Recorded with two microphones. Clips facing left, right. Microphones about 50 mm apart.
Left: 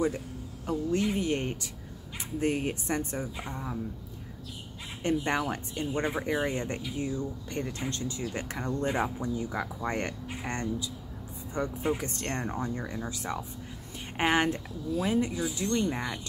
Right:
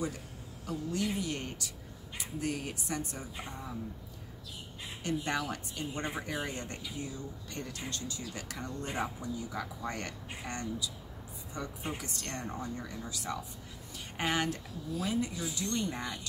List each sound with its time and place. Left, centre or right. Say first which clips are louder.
0.7 s speech: left 6 dB; left
5.0 s speech: left 5 dB; left